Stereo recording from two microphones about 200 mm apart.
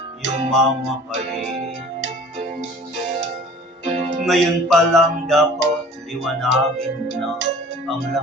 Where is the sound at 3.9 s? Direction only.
35° right (ahead or behind).